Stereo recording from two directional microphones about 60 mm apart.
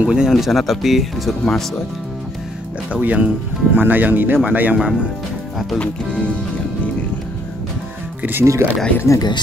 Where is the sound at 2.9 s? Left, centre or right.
Right.